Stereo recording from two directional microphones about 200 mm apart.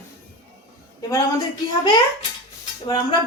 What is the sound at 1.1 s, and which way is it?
A woman's voice, 20° left (ahead or behind).